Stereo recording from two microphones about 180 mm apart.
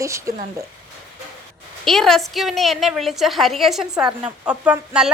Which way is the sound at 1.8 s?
Centre (ahead or behind).